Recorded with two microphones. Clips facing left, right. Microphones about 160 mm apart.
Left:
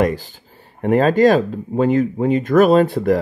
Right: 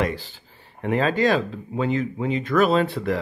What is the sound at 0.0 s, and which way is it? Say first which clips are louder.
A man's voice: left 7 dB; 45° left (ahead or behind).